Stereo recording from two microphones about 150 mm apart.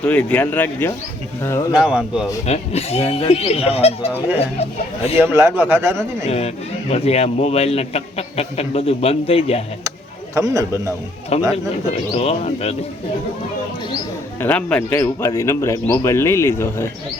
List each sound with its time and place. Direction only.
0.0 s speech: 10° left (ahead or behind)
1.7 s speech: 5° right (ahead or behind)
2.5 s a man's voice: 45° left (ahead or behind)
5.1 s a man's voice: 15° right (ahead or behind)
6.2 s a man's voice: 45° left (ahead or behind)
10.3 s a man's voice: 20° right (ahead or behind)
11.3 s a man's voice: 45° left (ahead or behind)
14.4 s speech: 10° left (ahead or behind)